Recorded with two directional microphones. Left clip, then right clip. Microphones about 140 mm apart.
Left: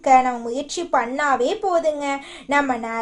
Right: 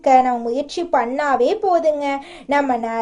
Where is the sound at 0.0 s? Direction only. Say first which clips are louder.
Right 2 dB; 15° right (ahead or behind).